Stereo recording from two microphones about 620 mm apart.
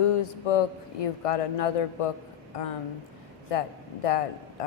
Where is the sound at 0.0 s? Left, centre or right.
Left.